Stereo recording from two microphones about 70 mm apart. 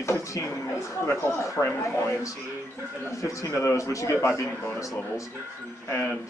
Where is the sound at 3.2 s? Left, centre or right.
Left.